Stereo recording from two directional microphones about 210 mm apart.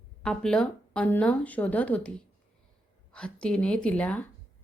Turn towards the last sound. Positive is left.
turn(degrees=5)  # may be behind; listen again after turning